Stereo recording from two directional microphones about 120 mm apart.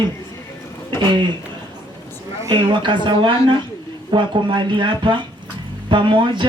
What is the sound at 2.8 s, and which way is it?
Speech, 45° right (ahead or behind).